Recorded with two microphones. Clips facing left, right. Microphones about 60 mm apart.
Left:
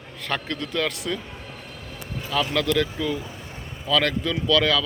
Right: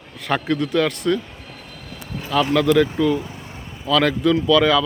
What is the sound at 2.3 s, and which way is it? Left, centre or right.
Speech, centre.